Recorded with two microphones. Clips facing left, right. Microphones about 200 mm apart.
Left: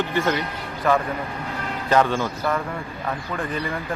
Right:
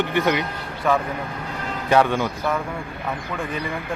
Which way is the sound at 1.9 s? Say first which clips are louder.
Right 1 dB; 15° right (ahead or behind).